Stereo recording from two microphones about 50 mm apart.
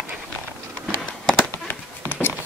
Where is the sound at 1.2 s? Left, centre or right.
Centre.